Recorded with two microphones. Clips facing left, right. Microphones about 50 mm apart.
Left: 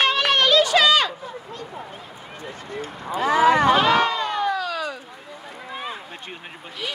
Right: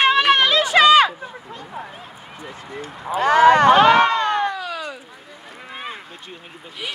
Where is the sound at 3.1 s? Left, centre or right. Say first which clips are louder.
Right 4 dB; right.